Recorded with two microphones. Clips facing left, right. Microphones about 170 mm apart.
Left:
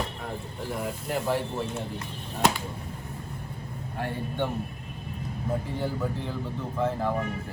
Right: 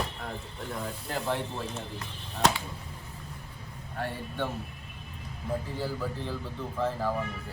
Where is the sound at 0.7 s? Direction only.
15° left (ahead or behind).